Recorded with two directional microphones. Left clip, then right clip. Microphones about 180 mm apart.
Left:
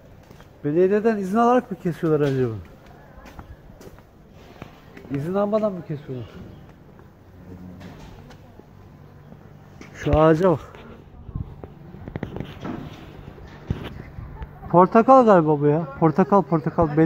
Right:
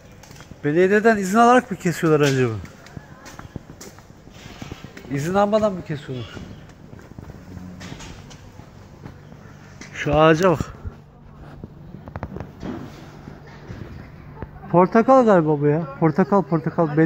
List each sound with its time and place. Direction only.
0.6 s speech: 5° left (ahead or behind)
5.3 s speech: 5° left (ahead or behind)
9.9 s speech: 35° left (ahead or behind)
10.4 s speech: 15° left (ahead or behind)
14.7 s speech: 5° left (ahead or behind)